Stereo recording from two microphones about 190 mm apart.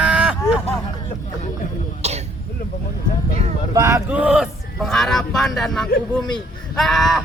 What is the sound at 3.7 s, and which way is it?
Speech, 15° right (ahead or behind).